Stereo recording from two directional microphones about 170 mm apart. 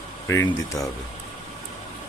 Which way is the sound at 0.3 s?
15° left (ahead or behind).